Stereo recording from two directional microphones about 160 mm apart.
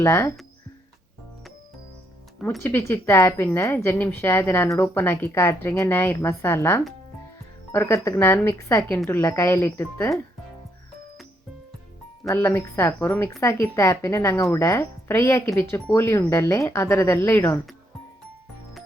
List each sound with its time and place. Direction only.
0.0 s a woman's voice: 15° left (ahead or behind)
2.6 s a woman's voice: 15° left (ahead or behind)
12.3 s a woman's voice: 15° left (ahead or behind)